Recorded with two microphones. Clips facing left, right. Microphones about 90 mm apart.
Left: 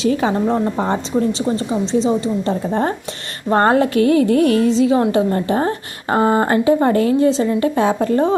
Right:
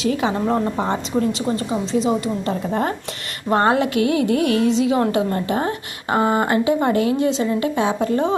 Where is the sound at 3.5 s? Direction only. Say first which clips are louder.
Left 3 dB; 35° left (ahead or behind).